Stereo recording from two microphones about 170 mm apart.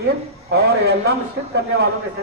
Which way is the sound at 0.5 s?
75° right (ahead or behind).